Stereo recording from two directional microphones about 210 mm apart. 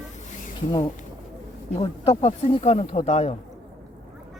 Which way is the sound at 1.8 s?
30° left (ahead or behind).